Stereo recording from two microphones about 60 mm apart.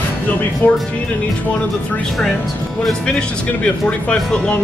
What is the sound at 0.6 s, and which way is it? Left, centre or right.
Speech, left.